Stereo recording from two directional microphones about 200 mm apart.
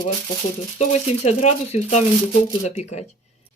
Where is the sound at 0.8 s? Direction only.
35° left (ahead or behind).